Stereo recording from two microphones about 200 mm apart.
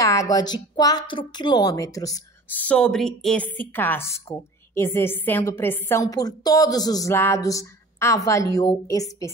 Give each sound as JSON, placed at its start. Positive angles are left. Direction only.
{"t": 0.0, "sound": "a woman's voice", "side_deg": 15}
{"t": 2.6, "sound": "a woman's voice", "side_deg": 5}